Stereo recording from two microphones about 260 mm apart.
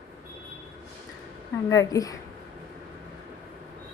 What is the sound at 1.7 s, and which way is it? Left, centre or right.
Speech, centre.